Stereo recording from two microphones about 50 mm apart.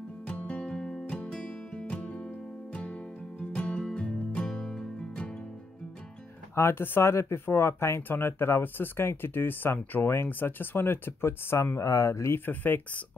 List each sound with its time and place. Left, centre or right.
0.3 s music: left
6.5 s speech: left
11.5 s speech: left
12.3 s speech: left